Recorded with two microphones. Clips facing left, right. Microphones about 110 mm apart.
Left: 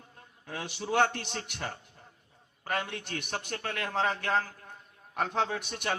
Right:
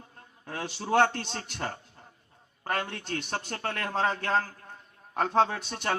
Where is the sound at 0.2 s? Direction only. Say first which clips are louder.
Right 2 dB; 50° right (ahead or behind).